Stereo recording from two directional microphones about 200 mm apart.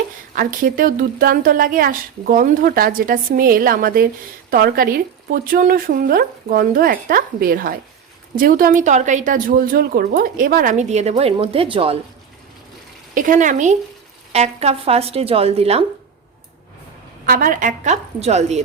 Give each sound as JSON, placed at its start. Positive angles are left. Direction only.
{"t": 0.3, "sound": "a woman's voice", "side_deg": -45}
{"t": 13.1, "sound": "a woman's voice", "side_deg": -40}
{"t": 17.2, "sound": "a woman's voice", "side_deg": -45}